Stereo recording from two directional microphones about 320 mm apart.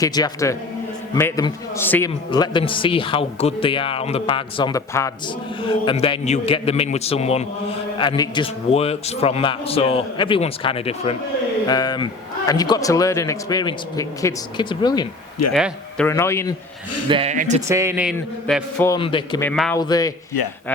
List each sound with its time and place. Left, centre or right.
0.0 s a man's voice: centre
15.5 s a man's voice: centre
17.1 s speech: centre
17.7 s a man's voice: centre
19.5 s a man's voice: centre